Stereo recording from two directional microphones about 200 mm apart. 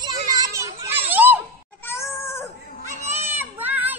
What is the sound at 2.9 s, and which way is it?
Goat, 35° right (ahead or behind).